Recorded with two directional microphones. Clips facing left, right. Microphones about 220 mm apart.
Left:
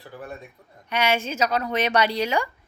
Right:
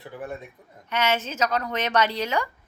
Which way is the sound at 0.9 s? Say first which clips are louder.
Left 1 dB; 10° left (ahead or behind).